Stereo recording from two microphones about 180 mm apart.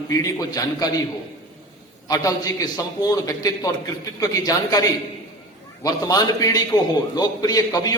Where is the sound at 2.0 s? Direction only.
20° left (ahead or behind).